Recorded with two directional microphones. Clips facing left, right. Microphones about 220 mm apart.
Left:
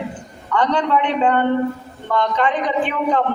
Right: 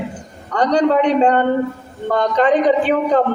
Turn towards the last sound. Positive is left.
turn(degrees=-40)  # may be behind; listen again after turning